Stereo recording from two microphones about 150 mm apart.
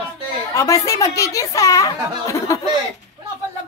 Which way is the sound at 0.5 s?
20° left (ahead or behind).